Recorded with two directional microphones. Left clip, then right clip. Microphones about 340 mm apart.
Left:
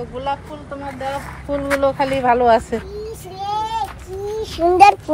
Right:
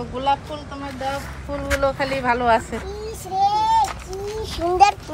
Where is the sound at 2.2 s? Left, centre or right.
Left.